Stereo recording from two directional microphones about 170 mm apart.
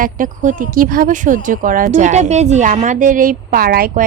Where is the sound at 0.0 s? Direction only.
50° right (ahead or behind).